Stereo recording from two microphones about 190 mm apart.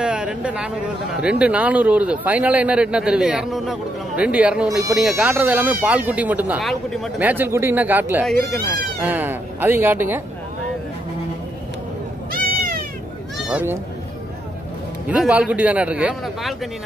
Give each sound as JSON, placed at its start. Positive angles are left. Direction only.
{"t": 0.0, "sound": "a man's voice", "side_deg": -5}
{"t": 7.2, "sound": "speech", "side_deg": -10}
{"t": 12.3, "sound": "cat", "side_deg": -50}
{"t": 13.5, "sound": "speech", "side_deg": -10}
{"t": 15.0, "sound": "speech", "side_deg": -5}